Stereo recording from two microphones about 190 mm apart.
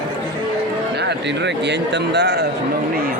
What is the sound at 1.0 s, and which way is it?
Speech, 65° right (ahead or behind).